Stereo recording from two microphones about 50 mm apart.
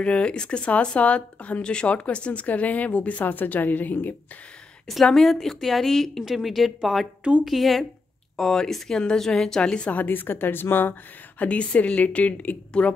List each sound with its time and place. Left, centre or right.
0.0 s speech: left
4.8 s a woman's voice: centre
9.9 s a woman's voice: left
11.4 s speech: left